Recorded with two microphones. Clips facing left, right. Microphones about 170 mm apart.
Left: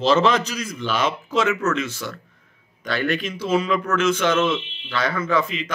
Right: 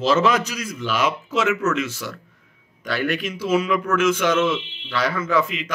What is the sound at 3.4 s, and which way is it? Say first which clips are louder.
Speech: right 1 dB; 30° left (ahead or behind).